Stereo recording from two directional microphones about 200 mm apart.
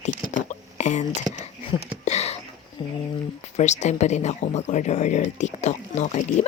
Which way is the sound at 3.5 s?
35° left (ahead or behind).